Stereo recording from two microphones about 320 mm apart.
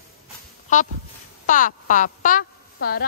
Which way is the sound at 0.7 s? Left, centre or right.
Left.